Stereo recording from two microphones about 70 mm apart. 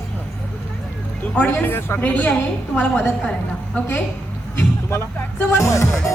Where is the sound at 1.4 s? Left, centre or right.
Left.